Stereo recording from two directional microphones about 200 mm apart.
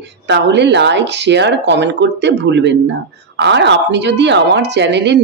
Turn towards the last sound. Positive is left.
turn(degrees=-60)  # may be behind; listen again after turning